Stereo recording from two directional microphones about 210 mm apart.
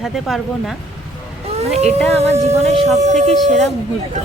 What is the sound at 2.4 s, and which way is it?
Speech, 30° right (ahead or behind).